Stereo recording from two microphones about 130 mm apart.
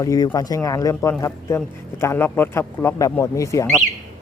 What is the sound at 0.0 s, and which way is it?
A man's voice, 25° left (ahead or behind).